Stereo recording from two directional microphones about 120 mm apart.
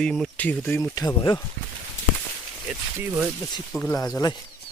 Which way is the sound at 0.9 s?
35° left (ahead or behind).